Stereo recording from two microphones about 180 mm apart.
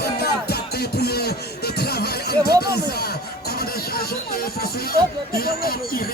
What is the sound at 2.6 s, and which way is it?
Speech, 60° left (ahead or behind).